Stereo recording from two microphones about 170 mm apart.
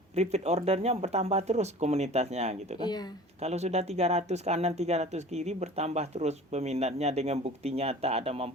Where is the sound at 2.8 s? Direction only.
25° left (ahead or behind).